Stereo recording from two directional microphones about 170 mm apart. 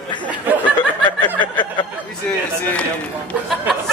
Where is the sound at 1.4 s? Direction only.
25° left (ahead or behind).